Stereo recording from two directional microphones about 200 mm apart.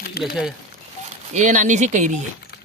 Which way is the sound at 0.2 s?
50° left (ahead or behind).